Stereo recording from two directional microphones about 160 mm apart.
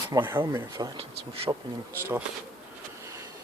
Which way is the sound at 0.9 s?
35° right (ahead or behind).